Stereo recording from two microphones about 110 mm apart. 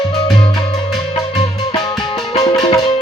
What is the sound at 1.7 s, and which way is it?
Music, 40° left (ahead or behind).